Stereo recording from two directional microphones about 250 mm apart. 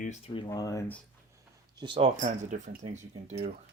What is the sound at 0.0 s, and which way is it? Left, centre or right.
Speech, left.